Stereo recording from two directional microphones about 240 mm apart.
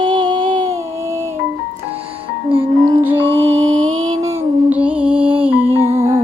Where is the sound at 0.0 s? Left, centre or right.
Centre.